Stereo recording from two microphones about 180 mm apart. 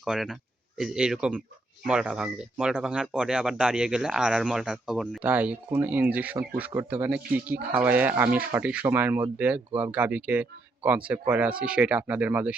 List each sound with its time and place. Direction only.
0.0 s speech: 5° right (ahead or behind)